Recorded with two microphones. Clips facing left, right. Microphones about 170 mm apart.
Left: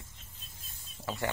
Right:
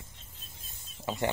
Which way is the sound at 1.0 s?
20° right (ahead or behind).